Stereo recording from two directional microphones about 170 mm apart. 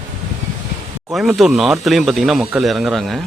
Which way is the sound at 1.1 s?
Centre (ahead or behind).